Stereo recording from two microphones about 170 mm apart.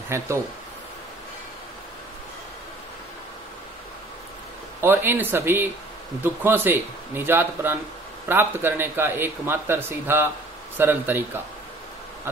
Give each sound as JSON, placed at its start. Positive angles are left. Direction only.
{"t": 0.1, "sound": "a man's voice", "side_deg": -15}
{"t": 4.8, "sound": "a man's voice", "side_deg": -10}